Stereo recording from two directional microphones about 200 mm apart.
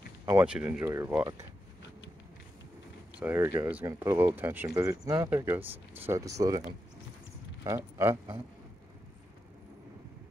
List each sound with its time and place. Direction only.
0.2 s a sound: 15° right (ahead or behind)
0.5 s speech: 5° right (ahead or behind)
3.2 s speech: 10° right (ahead or behind)
7.6 s speech: 15° right (ahead or behind)